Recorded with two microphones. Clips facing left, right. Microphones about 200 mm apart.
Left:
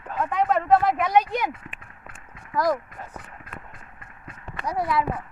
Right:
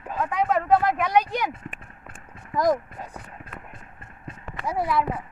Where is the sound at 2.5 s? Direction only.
20° right (ahead or behind).